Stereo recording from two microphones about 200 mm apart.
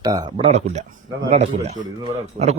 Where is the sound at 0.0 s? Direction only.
20° right (ahead or behind).